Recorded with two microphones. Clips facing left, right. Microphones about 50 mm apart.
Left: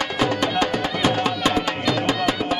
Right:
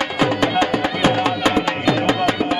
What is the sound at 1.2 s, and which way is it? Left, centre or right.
Music, right.